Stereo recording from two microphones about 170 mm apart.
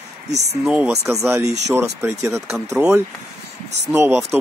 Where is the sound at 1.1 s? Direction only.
15° right (ahead or behind).